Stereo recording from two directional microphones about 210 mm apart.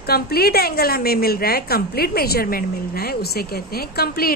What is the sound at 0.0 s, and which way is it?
A woman's voice, 45° left (ahead or behind).